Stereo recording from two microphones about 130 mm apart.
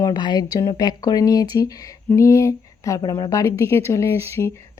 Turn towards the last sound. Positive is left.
turn(degrees=20)  # may be behind; listen again after turning